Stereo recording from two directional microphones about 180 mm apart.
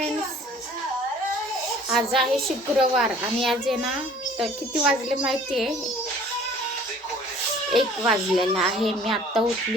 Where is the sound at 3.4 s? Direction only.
Centre (ahead or behind).